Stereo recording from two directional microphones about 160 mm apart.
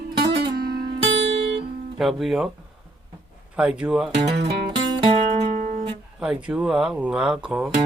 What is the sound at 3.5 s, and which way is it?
Speech, 5° right (ahead or behind).